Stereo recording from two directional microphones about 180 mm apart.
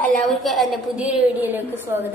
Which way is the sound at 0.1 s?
Centre (ahead or behind).